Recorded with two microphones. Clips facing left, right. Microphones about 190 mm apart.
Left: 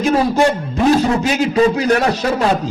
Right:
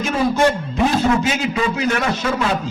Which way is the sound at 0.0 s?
40° left (ahead or behind).